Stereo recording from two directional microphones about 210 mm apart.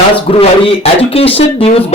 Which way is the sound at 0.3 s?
25° left (ahead or behind).